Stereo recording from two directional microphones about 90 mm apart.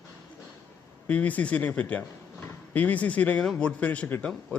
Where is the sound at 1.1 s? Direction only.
15° left (ahead or behind).